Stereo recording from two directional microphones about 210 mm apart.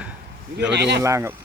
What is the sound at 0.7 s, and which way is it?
Speech, 55° right (ahead or behind).